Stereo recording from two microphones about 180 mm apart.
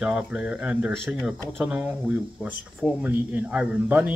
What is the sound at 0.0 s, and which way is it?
Speech, 5° right (ahead or behind).